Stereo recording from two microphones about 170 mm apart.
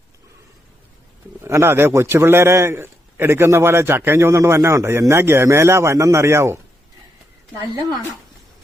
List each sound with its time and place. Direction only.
1.4 s a man's voice: 15° right (ahead or behind)